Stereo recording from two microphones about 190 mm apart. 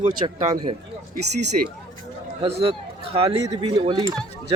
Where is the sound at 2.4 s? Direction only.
30° right (ahead or behind).